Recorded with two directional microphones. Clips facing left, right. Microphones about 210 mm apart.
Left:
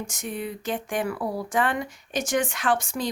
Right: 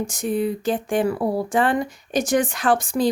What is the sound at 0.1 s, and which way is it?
A woman's voice, 35° right (ahead or behind).